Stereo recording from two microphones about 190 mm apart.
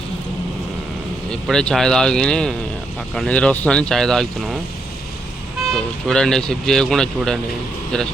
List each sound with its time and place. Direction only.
1.3 s speech: 5° left (ahead or behind)
5.7 s speech: 5° left (ahead or behind)